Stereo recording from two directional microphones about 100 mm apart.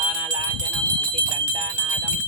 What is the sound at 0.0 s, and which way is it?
Jingle bell, 40° right (ahead or behind).